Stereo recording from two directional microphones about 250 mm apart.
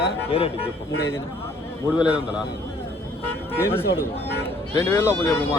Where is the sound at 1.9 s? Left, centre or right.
Centre.